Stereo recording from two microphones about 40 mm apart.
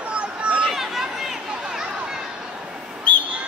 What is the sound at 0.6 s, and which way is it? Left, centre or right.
Chatter, centre.